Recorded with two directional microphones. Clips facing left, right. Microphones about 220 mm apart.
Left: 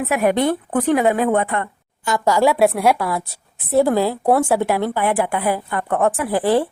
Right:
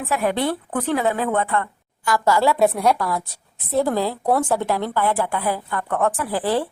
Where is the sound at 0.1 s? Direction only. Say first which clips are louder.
Left 4 dB; 15° left (ahead or behind).